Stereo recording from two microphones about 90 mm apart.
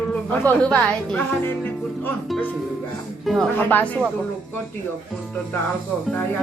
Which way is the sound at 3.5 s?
20° left (ahead or behind).